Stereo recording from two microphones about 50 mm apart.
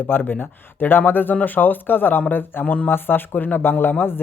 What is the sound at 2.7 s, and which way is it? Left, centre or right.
Speech, left.